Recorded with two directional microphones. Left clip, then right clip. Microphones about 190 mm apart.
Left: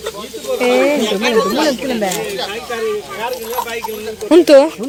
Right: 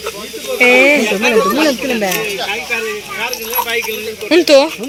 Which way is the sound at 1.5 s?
35° right (ahead or behind).